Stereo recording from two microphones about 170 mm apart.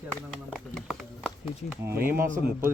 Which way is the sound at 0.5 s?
Centre (ahead or behind).